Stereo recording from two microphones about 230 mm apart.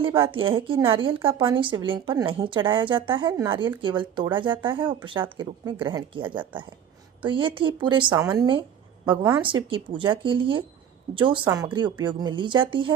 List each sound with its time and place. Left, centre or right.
0.0 s a woman's voice: right